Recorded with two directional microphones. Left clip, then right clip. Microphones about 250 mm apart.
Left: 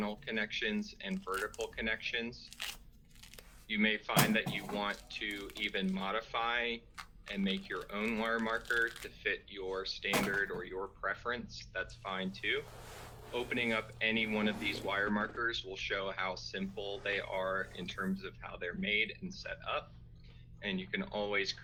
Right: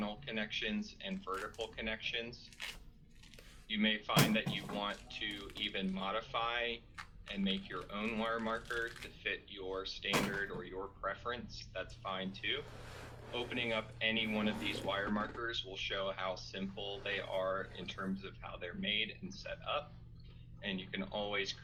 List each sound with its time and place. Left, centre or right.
0.0 s speech: left
3.7 s speech: left